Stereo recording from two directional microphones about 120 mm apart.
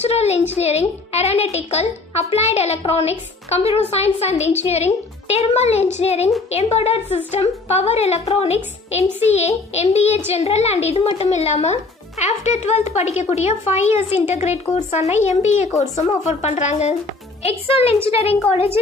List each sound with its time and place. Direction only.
0.0 s a woman's voice: 60° left (ahead or behind)
17.4 s a woman's voice: 55° left (ahead or behind)